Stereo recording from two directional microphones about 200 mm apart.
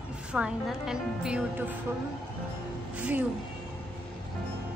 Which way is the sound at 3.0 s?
5° right (ahead or behind).